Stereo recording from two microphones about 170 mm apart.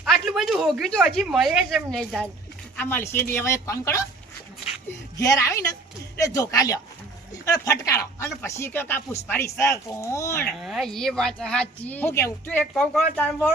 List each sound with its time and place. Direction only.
0.0 s speech: centre (ahead or behind); by 4.0 s 15° left (ahead or behind)
5.1 s speech: 20° left (ahead or behind)
10.6 s speech: centre (ahead or behind)